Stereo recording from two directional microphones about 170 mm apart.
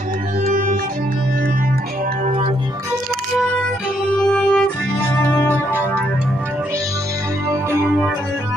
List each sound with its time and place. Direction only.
0.5 s music: 50° right (ahead or behind)
4.3 s music: 5° left (ahead or behind)